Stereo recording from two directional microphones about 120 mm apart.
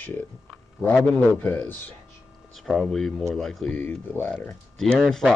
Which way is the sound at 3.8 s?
15° left (ahead or behind).